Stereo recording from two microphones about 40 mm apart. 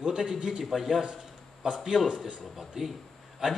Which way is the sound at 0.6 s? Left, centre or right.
Centre.